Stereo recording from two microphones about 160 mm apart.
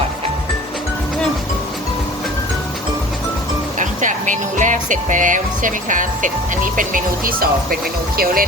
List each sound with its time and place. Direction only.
3.8 s speech: 50° right (ahead or behind); by 8.4 s 70° right (ahead or behind)